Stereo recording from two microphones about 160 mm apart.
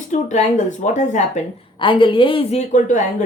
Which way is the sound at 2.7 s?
50° left (ahead or behind).